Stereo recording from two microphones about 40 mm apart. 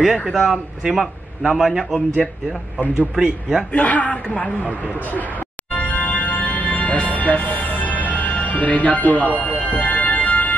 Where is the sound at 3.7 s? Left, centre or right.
Left.